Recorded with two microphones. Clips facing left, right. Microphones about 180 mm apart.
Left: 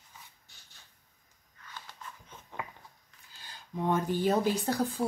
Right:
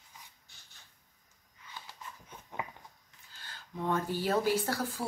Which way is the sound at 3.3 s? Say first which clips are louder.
Left 2 dB; 15° left (ahead or behind).